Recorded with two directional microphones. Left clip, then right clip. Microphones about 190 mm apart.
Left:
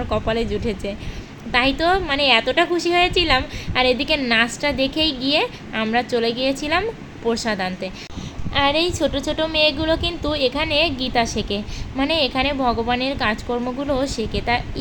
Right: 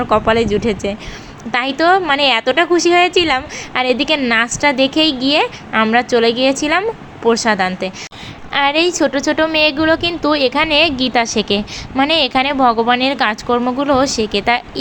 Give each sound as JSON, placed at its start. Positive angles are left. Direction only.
{"t": 0.1, "sound": "a woman's voice", "side_deg": -15}